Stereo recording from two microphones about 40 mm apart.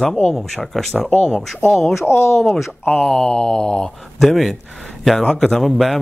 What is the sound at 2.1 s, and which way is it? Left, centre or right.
Speech, left.